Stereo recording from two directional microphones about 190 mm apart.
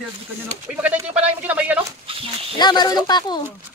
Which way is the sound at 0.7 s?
5° right (ahead or behind).